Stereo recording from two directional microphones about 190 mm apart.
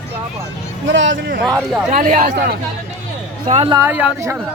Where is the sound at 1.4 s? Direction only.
Centre (ahead or behind).